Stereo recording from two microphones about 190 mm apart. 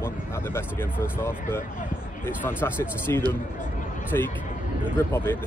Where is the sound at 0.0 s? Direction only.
10° left (ahead or behind).